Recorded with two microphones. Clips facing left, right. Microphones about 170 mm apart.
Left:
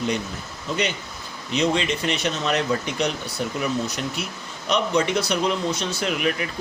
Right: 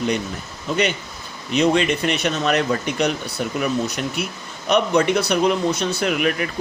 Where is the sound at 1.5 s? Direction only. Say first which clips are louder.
Right 5 dB; 60° right (ahead or behind).